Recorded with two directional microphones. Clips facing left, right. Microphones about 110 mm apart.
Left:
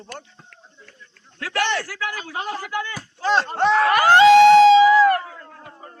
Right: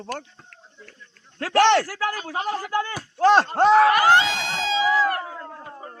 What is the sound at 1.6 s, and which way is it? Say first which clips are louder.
Speech: right 7 dB; 80° right.